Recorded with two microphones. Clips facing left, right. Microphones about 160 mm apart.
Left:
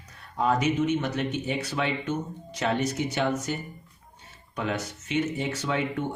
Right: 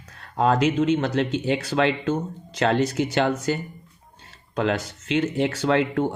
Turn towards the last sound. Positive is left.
turn(degrees=-80)